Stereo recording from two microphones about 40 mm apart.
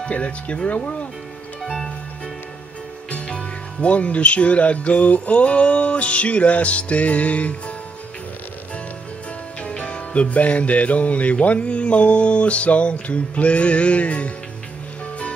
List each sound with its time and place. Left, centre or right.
0.0 s music: left
1.6 s music: centre
3.1 s speech: left
9.6 s music: left